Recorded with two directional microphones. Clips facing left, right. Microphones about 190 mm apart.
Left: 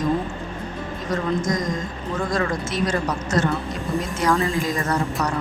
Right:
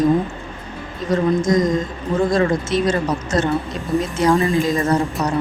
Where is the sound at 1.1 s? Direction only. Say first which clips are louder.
Right 7 dB; 25° right (ahead or behind).